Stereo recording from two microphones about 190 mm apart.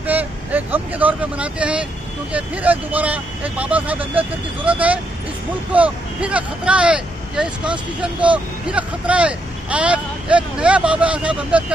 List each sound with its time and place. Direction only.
0.0 s speech: 10° right (ahead or behind)